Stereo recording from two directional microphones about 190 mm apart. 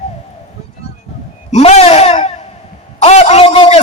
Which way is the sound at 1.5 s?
35° left (ahead or behind).